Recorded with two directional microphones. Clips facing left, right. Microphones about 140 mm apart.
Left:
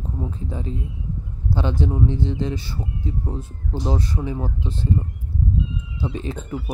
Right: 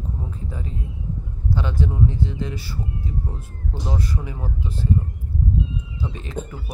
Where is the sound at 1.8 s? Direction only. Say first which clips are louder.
Even; 25° left (ahead or behind).